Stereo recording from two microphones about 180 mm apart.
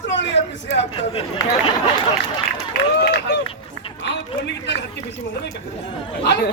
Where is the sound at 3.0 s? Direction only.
70° left (ahead or behind).